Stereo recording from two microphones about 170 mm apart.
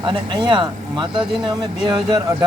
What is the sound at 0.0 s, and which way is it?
Speech, 30° right (ahead or behind).